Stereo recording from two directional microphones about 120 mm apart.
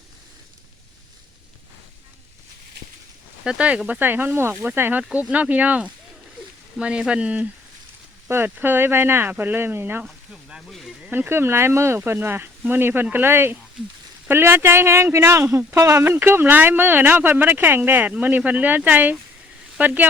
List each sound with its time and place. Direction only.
3.4 s speech: 10° right (ahead or behind)
10.1 s sizzle: centre (ahead or behind)
11.0 s speech: 15° right (ahead or behind)